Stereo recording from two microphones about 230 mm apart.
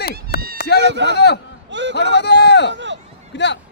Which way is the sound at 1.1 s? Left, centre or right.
Left.